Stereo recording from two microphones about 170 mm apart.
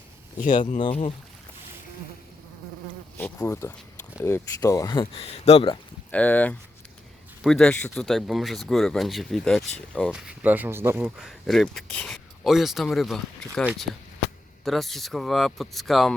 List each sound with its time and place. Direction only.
0.3 s speech: 45° left (ahead or behind)
3.3 s speech: 20° left (ahead or behind); by 5.7 s 35° left (ahead or behind)
6.1 s speech: 10° left (ahead or behind)
10.1 s speech: 5° right (ahead or behind)
11.2 s speech: centre (ahead or behind)